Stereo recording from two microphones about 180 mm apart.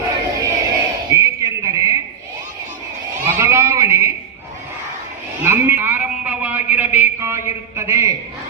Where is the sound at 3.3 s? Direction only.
15° right (ahead or behind).